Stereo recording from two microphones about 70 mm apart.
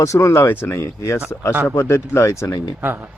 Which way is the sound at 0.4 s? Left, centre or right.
Left.